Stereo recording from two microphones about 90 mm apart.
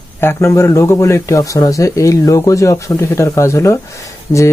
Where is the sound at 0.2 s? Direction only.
30° left (ahead or behind).